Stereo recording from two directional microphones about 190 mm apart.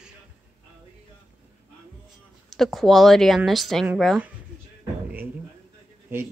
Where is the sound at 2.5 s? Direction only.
Centre (ahead or behind).